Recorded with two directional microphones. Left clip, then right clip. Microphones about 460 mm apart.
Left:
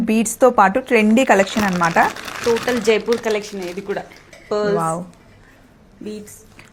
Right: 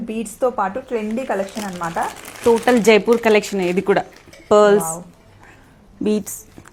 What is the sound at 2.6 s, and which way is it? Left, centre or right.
Speech, right.